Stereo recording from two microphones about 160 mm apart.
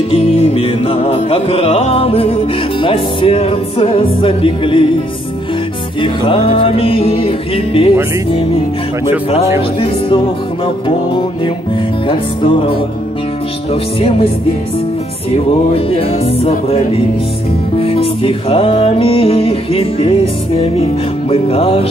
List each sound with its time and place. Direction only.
0.1 s music: 35° left (ahead or behind)
6.2 s music: 35° left (ahead or behind)
9.8 s music: 30° left (ahead or behind)
15.3 s music: 35° left (ahead or behind)